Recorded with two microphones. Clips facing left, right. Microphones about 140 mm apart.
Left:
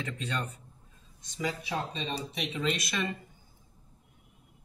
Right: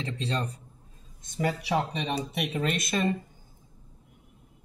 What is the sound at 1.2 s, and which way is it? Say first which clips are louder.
Speech: right 5 dB; 55° right (ahead or behind).